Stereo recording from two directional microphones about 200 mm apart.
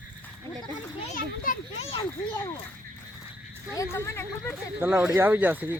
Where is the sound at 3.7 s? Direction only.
15° left (ahead or behind).